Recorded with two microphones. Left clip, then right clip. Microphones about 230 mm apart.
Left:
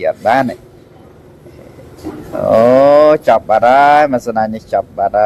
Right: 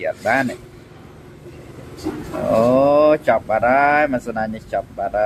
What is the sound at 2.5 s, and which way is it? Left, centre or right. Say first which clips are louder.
Speech: left 7 dB; left.